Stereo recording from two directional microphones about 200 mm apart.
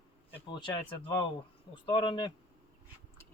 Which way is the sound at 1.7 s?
25° left (ahead or behind).